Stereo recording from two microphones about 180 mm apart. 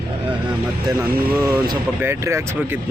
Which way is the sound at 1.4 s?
10° right (ahead or behind).